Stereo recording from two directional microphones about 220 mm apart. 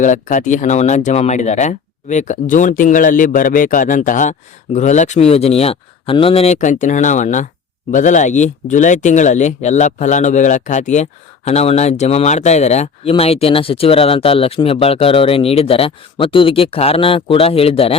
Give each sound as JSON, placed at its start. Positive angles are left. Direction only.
{"t": 0.0, "sound": "speech", "side_deg": 35}